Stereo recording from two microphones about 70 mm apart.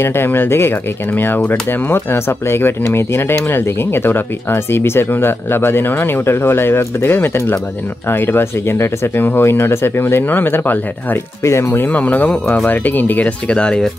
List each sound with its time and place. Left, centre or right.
0.0 s speech: left
11.4 s speech: left
11.8 s speech: left